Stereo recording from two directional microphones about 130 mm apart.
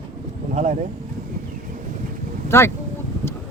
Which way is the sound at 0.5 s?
60° right (ahead or behind).